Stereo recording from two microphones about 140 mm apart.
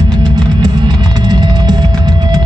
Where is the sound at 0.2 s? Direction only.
30° right (ahead or behind).